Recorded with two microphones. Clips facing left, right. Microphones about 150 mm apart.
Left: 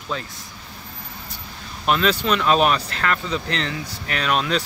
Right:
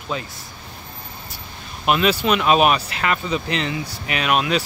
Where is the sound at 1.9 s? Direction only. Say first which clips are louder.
Right 2 dB; 10° right (ahead or behind).